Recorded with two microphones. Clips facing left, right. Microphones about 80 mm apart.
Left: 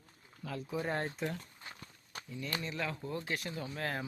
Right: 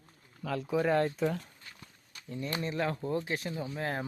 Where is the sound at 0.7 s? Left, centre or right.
Right.